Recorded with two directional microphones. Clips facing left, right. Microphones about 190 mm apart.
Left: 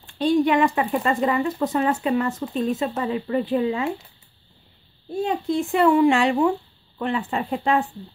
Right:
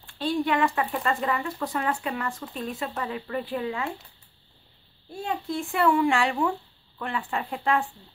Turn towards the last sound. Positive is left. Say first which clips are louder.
# left 4 dB
turn(degrees=20)  # may be behind; listen again after turning